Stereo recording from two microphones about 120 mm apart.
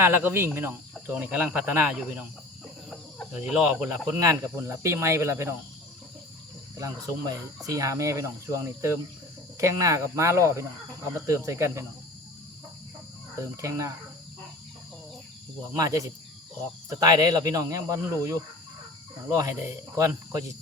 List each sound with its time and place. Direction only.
0.0 s speech: 20° right (ahead or behind)
3.3 s speech: 10° right (ahead or behind)
4.0 s speech: 25° right (ahead or behind)
6.7 s speech: 30° right (ahead or behind)
13.4 s speech: 25° right (ahead or behind)
15.7 s speech: 30° right (ahead or behind)
19.4 s speech: 25° right (ahead or behind)